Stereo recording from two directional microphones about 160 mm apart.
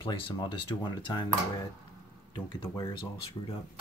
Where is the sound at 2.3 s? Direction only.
30° left (ahead or behind).